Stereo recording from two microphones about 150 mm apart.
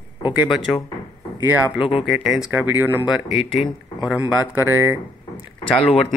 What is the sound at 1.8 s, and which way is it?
Speech, 40° left (ahead or behind).